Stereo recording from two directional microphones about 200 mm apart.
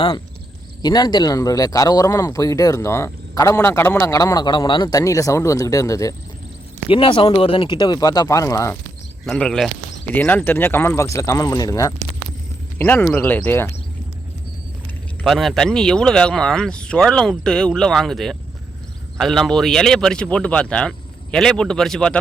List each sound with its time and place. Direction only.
0.8 s speech: 20° left (ahead or behind)
6.8 s speech: 25° left (ahead or behind)
9.2 s speech: 5° left (ahead or behind)
15.2 s speech: centre (ahead or behind)